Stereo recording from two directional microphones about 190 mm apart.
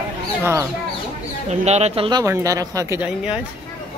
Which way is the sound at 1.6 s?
35° right (ahead or behind).